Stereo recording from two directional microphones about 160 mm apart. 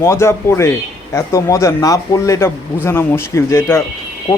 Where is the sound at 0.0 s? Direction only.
15° left (ahead or behind).